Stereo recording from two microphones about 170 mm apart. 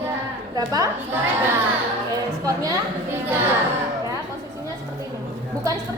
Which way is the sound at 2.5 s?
20° right (ahead or behind).